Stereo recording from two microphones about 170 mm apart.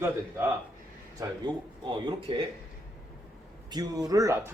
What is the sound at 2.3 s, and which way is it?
Speech, 30° right (ahead or behind).